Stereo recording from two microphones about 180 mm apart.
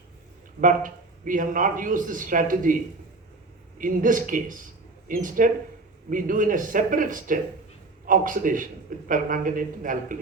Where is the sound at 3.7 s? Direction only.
50° right (ahead or behind).